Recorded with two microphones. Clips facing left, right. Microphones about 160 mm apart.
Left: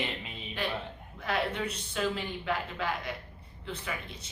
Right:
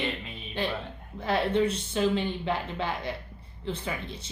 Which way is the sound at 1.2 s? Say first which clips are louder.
Right 7 dB; 30° right (ahead or behind).